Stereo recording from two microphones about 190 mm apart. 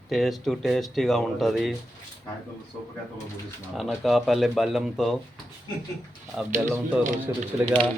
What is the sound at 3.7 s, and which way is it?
Speech, centre (ahead or behind).